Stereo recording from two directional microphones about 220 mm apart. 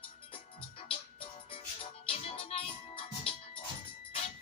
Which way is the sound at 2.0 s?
25° left (ahead or behind).